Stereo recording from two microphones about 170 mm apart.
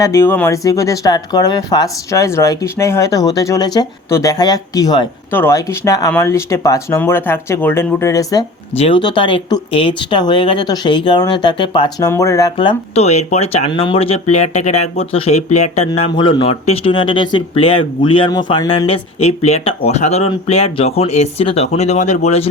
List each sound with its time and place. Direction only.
0.0 s speech: 15° left (ahead or behind)
12.5 s speech: 35° left (ahead or behind)
18.9 s speech: 40° left (ahead or behind)